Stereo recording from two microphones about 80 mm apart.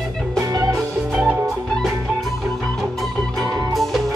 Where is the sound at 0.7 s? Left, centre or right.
Centre.